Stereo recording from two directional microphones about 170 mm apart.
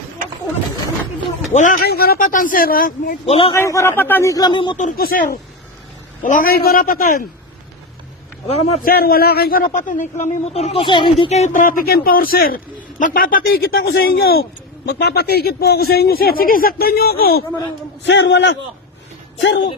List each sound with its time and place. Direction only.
1.5 s a man's voice: 50° left (ahead or behind)
1.8 s a man's voice: 65° left (ahead or behind)
3.2 s a man's voice: 35° left (ahead or behind)
3.5 s speech: 15° left (ahead or behind)
4.8 s a man's voice: 55° left (ahead or behind)
8.4 s a man's voice: 35° left (ahead or behind)
8.8 s a man's voice: 60° left (ahead or behind); by 11.3 s 30° left (ahead or behind)
11.3 s a man's voice: 40° left (ahead or behind); by 14.4 s 65° left (ahead or behind)
14.8 s a man's voice: 75° left (ahead or behind)
18.0 s a man's voice: 90° left